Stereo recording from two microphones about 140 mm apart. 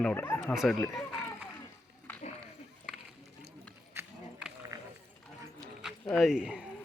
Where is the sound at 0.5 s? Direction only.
Centre (ahead or behind).